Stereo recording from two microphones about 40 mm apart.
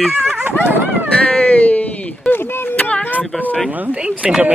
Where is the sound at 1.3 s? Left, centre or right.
Left.